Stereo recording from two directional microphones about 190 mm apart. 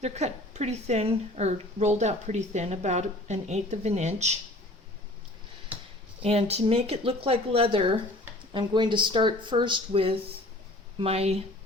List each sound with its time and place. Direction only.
0.0 s a woman's voice: 35° right (ahead or behind)
5.7 s a sound: 10° right (ahead or behind)
6.2 s a woman's voice: 30° right (ahead or behind)